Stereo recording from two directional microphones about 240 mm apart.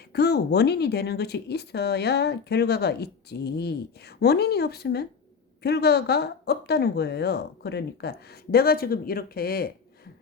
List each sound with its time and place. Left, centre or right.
0.1 s speech: left